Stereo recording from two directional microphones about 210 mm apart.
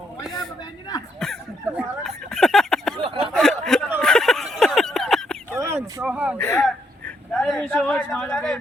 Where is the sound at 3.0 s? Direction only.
25° right (ahead or behind).